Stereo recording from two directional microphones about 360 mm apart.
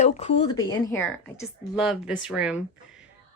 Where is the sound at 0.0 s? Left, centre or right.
Centre.